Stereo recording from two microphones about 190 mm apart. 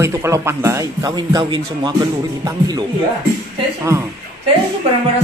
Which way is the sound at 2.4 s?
20° right (ahead or behind).